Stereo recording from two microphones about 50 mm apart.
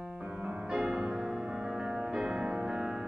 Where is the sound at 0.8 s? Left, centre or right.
Centre.